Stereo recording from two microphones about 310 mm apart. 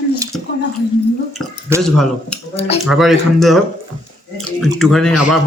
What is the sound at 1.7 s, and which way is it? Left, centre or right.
Speech, centre.